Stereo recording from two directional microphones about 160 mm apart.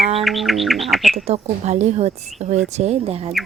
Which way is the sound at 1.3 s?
45° right (ahead or behind).